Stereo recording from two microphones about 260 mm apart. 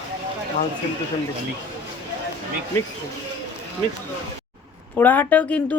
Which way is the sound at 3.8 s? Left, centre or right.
Centre.